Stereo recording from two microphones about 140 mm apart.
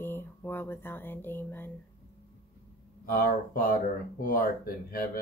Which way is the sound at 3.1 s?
90° left.